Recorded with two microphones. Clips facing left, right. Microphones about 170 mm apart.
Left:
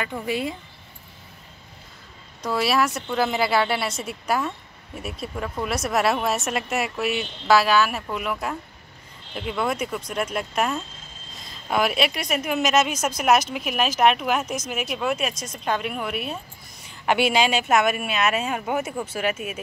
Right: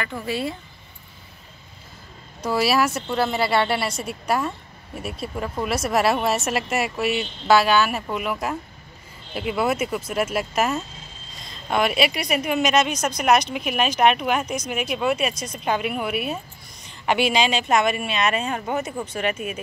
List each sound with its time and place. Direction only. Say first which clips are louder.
0.0 s speech: even; 15° left (ahead or behind)
2.4 s speech: right 2 dB; centre (ahead or behind)
16.8 s a sound: even; 5° left (ahead or behind)
17.3 s speech: even; 5° left (ahead or behind)